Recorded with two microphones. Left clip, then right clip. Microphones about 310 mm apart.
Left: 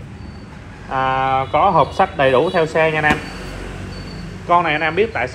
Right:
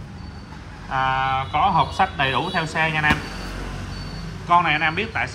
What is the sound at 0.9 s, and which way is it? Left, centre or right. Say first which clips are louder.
A man's voice: left 4 dB; centre.